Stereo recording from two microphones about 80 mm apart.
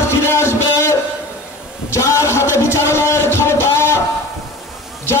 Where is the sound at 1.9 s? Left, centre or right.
Left.